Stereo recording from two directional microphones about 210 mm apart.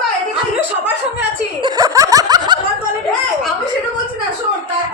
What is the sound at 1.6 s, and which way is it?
Snicker, 20° right (ahead or behind).